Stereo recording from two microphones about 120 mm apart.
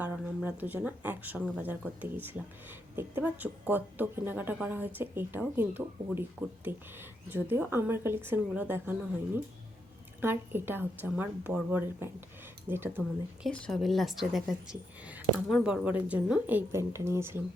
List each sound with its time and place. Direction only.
0.0 s a woman's voice: 15° right (ahead or behind)
13.5 s a woman's voice: 5° left (ahead or behind); by 17.4 s 20° right (ahead or behind)